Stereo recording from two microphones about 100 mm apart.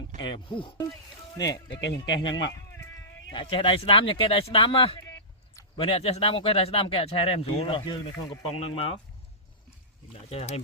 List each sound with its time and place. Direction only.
0.2 s speech: 55° left (ahead or behind)
1.4 s speech: 40° left (ahead or behind)
3.4 s speech: 70° left (ahead or behind)
8.4 s speech: 75° left (ahead or behind)
10.1 s speech: 85° left